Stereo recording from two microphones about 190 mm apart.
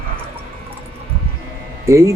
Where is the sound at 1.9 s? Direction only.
15° right (ahead or behind).